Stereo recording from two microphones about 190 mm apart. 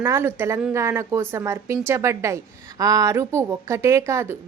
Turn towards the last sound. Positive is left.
turn(degrees=-15)  # may be behind; listen again after turning